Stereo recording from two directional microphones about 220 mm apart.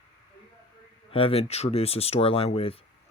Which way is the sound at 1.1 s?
25° left (ahead or behind).